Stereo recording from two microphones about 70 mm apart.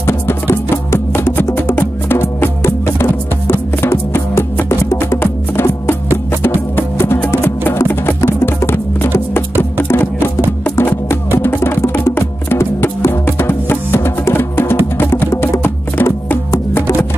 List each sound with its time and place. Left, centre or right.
0.0 s music: left
7.4 s music: left